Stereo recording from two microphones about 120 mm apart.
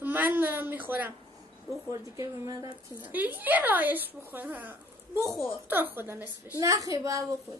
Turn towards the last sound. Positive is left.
turn(degrees=-25)  # may be behind; listen again after turning